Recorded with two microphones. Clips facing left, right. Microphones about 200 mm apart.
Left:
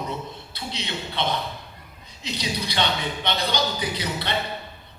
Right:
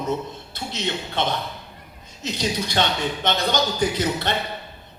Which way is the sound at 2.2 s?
45° right (ahead or behind).